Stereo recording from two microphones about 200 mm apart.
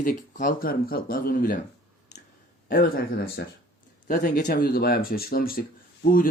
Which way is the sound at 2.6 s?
45° left (ahead or behind).